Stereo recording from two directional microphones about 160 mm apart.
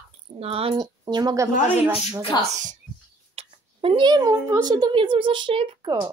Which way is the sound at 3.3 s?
35° right (ahead or behind).